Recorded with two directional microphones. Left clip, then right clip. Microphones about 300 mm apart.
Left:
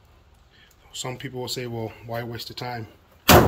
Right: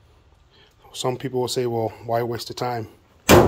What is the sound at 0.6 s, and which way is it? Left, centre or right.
Speech, centre.